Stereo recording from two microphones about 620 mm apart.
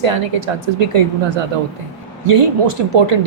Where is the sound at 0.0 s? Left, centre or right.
Right.